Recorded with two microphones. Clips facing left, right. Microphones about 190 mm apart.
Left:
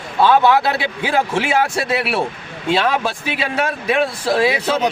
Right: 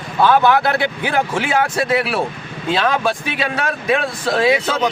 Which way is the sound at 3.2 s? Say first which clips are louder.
Left 1 dB; 25° left (ahead or behind).